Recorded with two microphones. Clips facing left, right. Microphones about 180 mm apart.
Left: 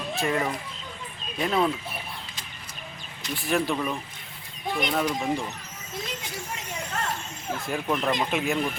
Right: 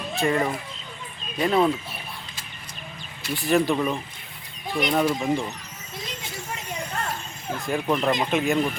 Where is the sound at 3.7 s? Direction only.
20° right (ahead or behind).